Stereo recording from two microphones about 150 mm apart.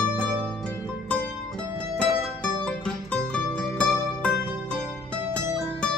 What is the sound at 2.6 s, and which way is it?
Music, 5° left (ahead or behind).